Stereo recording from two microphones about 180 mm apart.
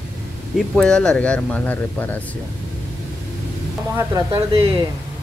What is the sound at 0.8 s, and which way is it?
Speech, 5° left (ahead or behind).